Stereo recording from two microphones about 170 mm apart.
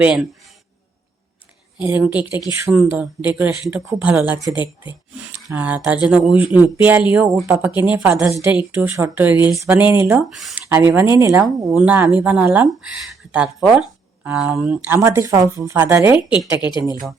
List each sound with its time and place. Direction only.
0.0 s speech: 5° right (ahead or behind)
1.8 s speech: 10° right (ahead or behind)
4.5 s speech: 25° left (ahead or behind)
5.5 s speech: 10° right (ahead or behind)
10.2 s speech: 5° right (ahead or behind)
10.8 s speech: 15° right (ahead or behind)
16.6 s speech: 25° left (ahead or behind)